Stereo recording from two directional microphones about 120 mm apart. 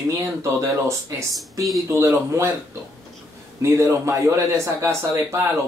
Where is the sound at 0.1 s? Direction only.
25° right (ahead or behind).